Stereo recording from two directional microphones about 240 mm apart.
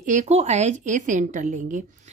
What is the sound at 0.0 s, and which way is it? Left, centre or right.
A woman's voice, right.